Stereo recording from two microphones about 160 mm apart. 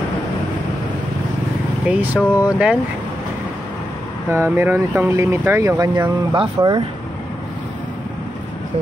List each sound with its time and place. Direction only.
1.9 s speech: 10° right (ahead or behind)
4.3 s speech: 15° right (ahead or behind)